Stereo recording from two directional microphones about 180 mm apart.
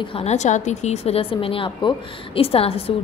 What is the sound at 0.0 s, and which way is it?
A woman's voice, 35° left (ahead or behind).